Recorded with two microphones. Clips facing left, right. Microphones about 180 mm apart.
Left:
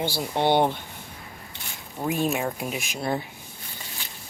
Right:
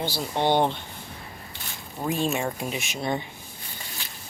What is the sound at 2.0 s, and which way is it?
Speech, 10° left (ahead or behind).